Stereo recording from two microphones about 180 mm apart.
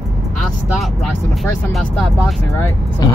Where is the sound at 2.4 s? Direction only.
15° left (ahead or behind).